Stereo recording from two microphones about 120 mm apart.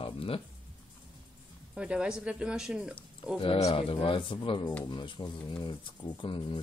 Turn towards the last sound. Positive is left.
turn(degrees=45)  # may be behind; listen again after turning